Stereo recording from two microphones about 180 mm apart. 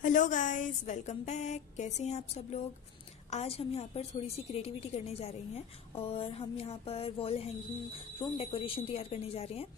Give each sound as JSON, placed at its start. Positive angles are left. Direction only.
{"t": 0.0, "sound": "a woman's voice", "side_deg": 45}